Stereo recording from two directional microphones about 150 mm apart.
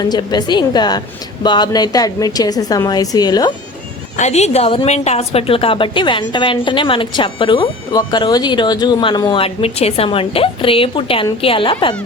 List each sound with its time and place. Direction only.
0.0 s a woman's voice: 30° left (ahead or behind)
4.2 s a woman's voice: 50° left (ahead or behind)